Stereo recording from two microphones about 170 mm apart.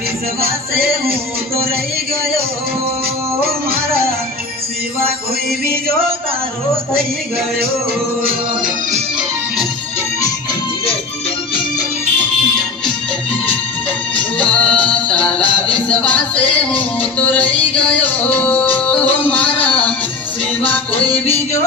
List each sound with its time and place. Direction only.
0.4 s music: 60° right (ahead or behind)
3.3 s music: 65° right (ahead or behind)
8.2 s music: 60° right (ahead or behind)
14.1 s music: 5° left (ahead or behind)